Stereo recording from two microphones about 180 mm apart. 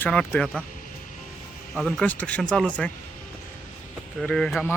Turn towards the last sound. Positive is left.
turn(degrees=5)  # may be behind; listen again after turning